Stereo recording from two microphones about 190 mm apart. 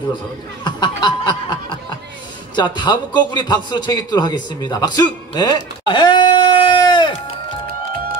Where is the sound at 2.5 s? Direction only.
25° left (ahead or behind).